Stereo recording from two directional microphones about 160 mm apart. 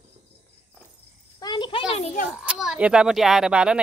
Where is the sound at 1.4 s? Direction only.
30° left (ahead or behind).